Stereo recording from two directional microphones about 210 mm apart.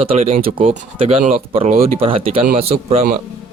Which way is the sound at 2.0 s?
25° right (ahead or behind).